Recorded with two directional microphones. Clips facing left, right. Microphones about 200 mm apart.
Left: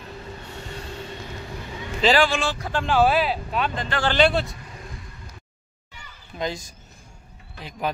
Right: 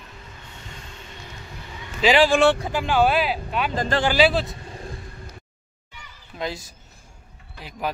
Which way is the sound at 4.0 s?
5° right (ahead or behind).